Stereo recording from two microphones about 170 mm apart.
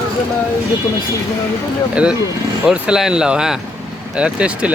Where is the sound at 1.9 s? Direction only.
5° right (ahead or behind).